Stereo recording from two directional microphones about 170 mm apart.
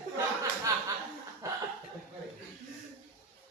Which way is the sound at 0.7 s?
15° right (ahead or behind).